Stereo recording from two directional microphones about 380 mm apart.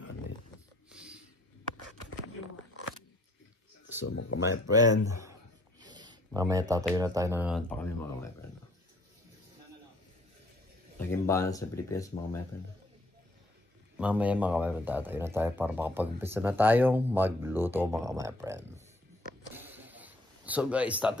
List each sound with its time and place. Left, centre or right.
0.9 s snort: centre
3.8 s speech: left
4.6 s speech: centre
11.0 s speech: centre
13.9 s speech: centre
19.5 s a sound: centre